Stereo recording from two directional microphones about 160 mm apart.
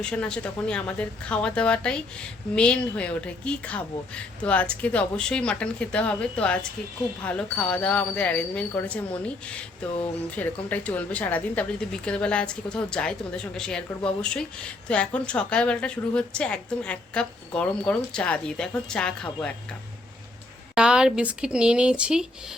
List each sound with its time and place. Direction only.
0.0 s a woman's voice: 5° left (ahead or behind)
20.7 s a woman's voice: 5° right (ahead or behind)